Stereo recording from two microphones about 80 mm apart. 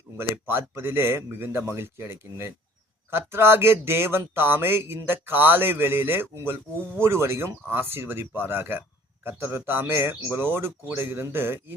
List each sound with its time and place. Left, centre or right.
0.2 s a man's voice: right